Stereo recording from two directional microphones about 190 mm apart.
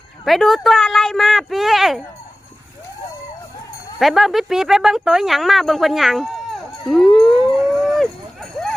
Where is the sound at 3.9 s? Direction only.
Centre (ahead or behind).